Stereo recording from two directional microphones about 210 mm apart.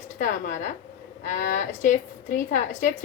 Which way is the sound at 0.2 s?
35° left (ahead or behind).